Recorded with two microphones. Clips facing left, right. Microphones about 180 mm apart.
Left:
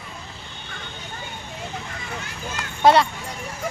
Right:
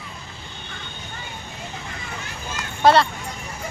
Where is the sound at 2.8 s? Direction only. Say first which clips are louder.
Even; 15° left (ahead or behind).